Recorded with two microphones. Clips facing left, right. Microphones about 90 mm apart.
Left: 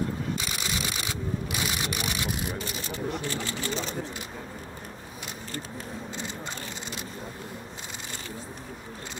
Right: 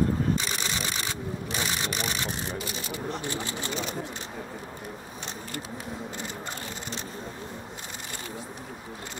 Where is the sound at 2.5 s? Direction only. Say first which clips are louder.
Even; 40° left (ahead or behind).